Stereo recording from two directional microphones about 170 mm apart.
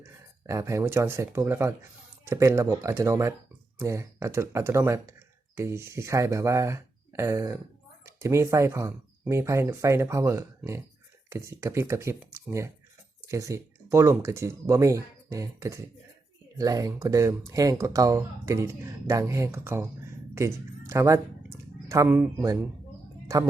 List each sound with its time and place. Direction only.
0.0 s speech: 15° right (ahead or behind)